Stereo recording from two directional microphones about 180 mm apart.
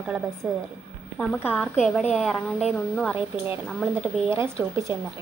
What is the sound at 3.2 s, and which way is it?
Speech, 10° right (ahead or behind).